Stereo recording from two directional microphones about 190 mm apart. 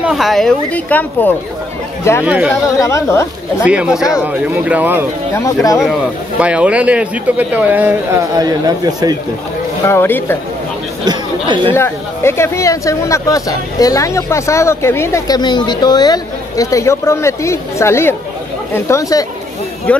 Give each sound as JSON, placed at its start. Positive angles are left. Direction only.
{"t": 0.0, "sound": "speech", "side_deg": 0}
{"t": 2.2, "sound": "speech", "side_deg": -5}
{"t": 2.8, "sound": "speech", "side_deg": 15}
{"t": 3.6, "sound": "speech", "side_deg": -5}
{"t": 5.3, "sound": "speech", "side_deg": 15}
{"t": 6.4, "sound": "speech", "side_deg": -5}
{"t": 8.4, "sound": "a man's voice", "side_deg": -20}
{"t": 9.8, "sound": "speech", "side_deg": 10}
{"t": 11.1, "sound": "chatter", "side_deg": -25}
{"t": 11.7, "sound": "speech", "side_deg": 15}